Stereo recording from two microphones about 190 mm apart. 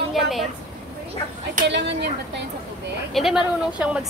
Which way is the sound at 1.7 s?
65° right (ahead or behind).